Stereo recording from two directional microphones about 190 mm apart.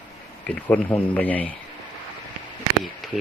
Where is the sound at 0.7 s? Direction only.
10° left (ahead or behind).